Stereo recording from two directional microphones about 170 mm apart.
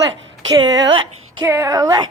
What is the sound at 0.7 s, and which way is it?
Speech, 90° right.